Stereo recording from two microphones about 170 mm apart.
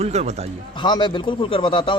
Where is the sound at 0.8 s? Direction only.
25° left (ahead or behind).